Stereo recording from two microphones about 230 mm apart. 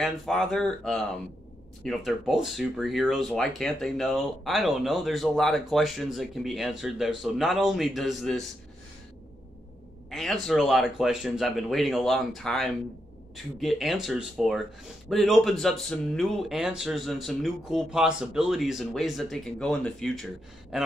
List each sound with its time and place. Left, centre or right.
0.0 s speech: centre
10.0 s speech: centre